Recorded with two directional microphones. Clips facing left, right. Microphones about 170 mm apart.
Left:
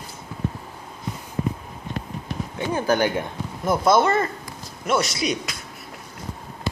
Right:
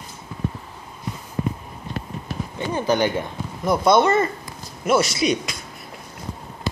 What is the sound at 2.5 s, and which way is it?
Speech, 10° left (ahead or behind).